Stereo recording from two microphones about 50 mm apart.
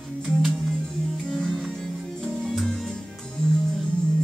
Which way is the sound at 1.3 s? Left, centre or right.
Centre.